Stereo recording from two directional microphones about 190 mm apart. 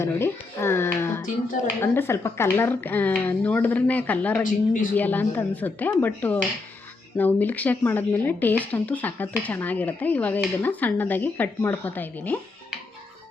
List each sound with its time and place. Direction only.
0.0 s speech: 15° left (ahead or behind)
4.4 s speech: 45° left (ahead or behind)
4.9 s speech: 10° left (ahead or behind)